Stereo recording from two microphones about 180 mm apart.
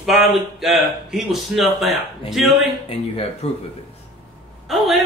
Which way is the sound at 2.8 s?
35° left (ahead or behind).